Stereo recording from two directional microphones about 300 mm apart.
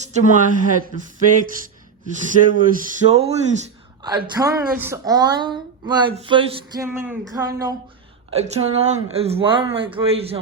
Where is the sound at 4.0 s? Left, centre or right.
Centre.